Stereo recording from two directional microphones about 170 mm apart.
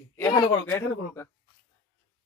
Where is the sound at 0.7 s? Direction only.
15° left (ahead or behind).